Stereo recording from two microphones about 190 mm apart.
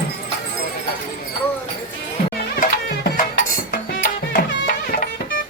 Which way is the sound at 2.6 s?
50° left (ahead or behind).